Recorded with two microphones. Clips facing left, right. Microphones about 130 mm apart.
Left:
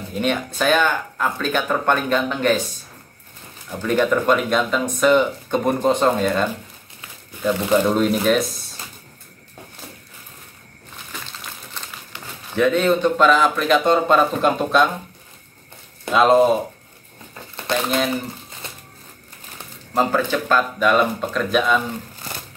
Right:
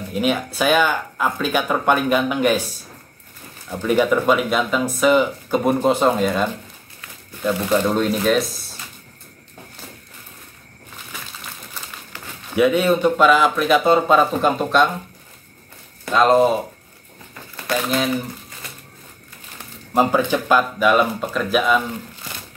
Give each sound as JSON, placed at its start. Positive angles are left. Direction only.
{"t": 0.1, "sound": "speech", "side_deg": -5}
{"t": 3.8, "sound": "speech", "side_deg": -10}
{"t": 11.1, "sound": "a sound", "side_deg": -10}
{"t": 12.5, "sound": "speech", "side_deg": -10}
{"t": 16.1, "sound": "speech", "side_deg": 0}
{"t": 17.8, "sound": "speech", "side_deg": 0}
{"t": 18.6, "sound": "crushing", "side_deg": 25}
{"t": 19.9, "sound": "speech", "side_deg": -15}